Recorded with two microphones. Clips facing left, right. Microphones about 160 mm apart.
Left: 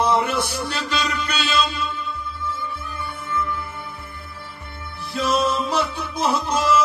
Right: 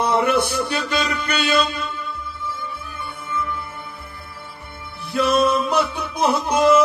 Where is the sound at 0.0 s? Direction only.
55° right (ahead or behind).